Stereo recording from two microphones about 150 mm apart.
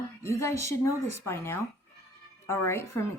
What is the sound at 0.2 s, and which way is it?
A woman's voice, 20° left (ahead or behind).